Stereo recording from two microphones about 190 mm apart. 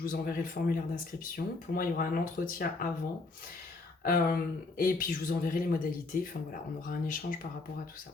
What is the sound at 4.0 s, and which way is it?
Speech, 50° left (ahead or behind).